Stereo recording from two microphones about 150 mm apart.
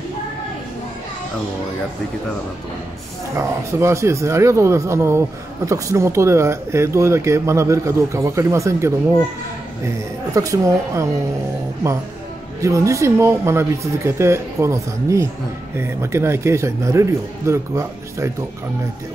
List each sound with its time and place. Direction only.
3.3 s speech: 20° right (ahead or behind)
10.3 s speech: 20° right (ahead or behind)
12.6 s speech: 20° right (ahead or behind)